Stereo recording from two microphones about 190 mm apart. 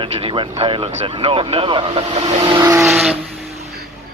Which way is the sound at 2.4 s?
15° right (ahead or behind).